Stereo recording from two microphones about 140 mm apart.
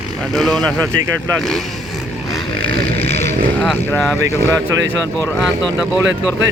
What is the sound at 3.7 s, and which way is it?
Speech, 10° left (ahead or behind).